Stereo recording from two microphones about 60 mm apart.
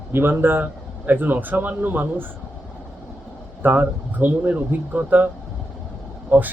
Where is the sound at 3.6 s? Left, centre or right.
Right.